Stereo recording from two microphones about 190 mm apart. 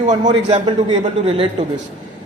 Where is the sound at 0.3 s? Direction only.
25° right (ahead or behind).